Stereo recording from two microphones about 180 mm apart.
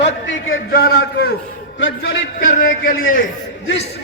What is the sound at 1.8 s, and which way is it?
Speech, 75° left (ahead or behind).